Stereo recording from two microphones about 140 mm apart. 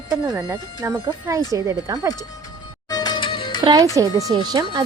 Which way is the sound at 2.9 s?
30° left (ahead or behind).